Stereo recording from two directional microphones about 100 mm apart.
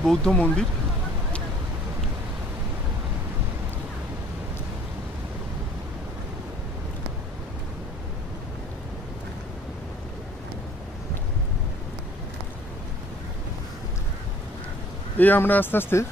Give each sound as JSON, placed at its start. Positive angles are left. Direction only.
{"t": 0.0, "sound": "speech", "side_deg": 5}
{"t": 15.1, "sound": "speech", "side_deg": 20}